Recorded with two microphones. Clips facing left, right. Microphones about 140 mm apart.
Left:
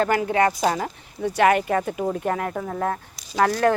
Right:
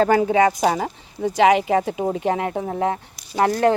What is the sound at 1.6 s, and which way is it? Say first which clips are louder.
Speech: right 3 dB; 15° right (ahead or behind).